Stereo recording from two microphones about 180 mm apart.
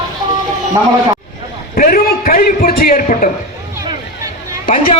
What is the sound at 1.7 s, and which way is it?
A man's voice, 55° left (ahead or behind).